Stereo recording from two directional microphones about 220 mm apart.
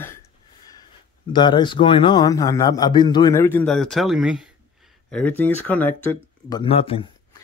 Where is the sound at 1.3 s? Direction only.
20° left (ahead or behind).